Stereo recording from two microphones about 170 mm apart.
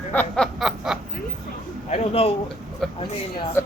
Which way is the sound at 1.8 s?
35° left (ahead or behind).